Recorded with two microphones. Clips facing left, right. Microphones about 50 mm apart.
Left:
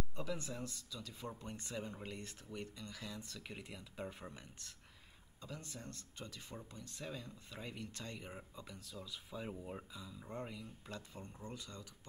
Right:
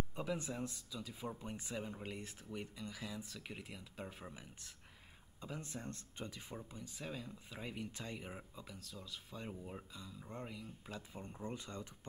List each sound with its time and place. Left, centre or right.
0.1 s speech: centre
5.4 s speech: right
6.5 s speech: centre
11.2 s speech: right